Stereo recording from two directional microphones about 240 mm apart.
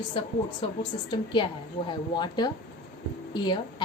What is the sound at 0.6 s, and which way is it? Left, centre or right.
Speech, left.